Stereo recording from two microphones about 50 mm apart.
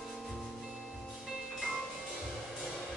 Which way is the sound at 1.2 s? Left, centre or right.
Centre.